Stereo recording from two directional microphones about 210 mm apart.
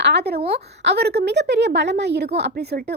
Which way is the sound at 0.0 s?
50° right (ahead or behind).